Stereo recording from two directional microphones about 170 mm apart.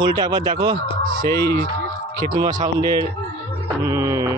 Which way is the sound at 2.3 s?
25° right (ahead or behind).